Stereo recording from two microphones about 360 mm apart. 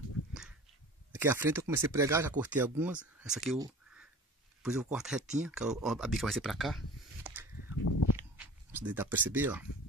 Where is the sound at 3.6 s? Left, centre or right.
Centre.